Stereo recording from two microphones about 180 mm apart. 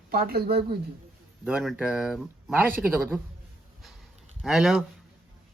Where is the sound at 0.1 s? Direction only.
60° right (ahead or behind).